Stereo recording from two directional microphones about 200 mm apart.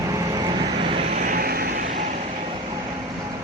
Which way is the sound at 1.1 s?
45° right (ahead or behind).